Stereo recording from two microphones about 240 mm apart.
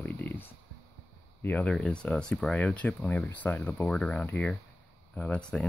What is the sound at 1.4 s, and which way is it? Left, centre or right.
Speech, centre.